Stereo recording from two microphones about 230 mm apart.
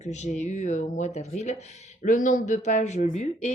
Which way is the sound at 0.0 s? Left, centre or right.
Left.